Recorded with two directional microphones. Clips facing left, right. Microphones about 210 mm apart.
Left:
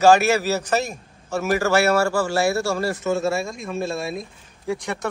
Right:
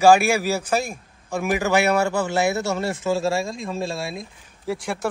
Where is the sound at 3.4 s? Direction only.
90° right.